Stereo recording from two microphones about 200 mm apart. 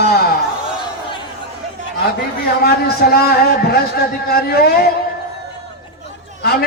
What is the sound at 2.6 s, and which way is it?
A man's voice, 50° left (ahead or behind).